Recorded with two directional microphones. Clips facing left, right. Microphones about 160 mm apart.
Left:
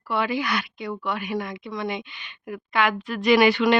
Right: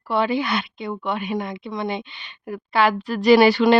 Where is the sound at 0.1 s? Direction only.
30° right (ahead or behind).